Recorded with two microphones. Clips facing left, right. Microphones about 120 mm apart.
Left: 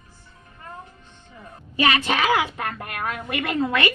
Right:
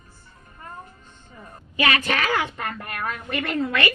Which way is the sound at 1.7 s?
30° left (ahead or behind).